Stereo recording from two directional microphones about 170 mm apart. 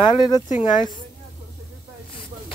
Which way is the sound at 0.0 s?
25° left (ahead or behind).